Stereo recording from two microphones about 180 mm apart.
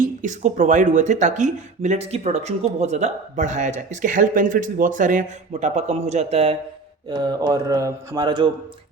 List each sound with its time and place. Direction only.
0.0 s speech: 45° right (ahead or behind)
7.1 s speech: 25° right (ahead or behind)